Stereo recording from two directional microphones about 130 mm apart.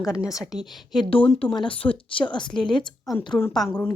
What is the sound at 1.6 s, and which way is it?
A woman's voice, 40° left (ahead or behind).